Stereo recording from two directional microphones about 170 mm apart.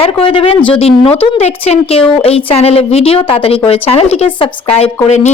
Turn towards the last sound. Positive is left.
turn(degrees=35)  # may be behind; listen again after turning